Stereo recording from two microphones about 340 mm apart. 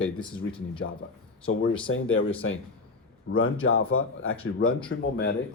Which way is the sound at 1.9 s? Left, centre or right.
Left.